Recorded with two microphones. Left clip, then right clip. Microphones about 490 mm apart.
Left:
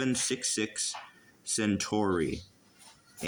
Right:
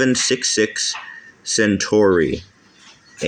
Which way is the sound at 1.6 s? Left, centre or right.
Left.